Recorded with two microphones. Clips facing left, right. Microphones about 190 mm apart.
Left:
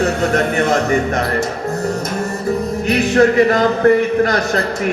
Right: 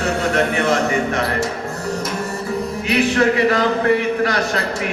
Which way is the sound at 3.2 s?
45° left (ahead or behind).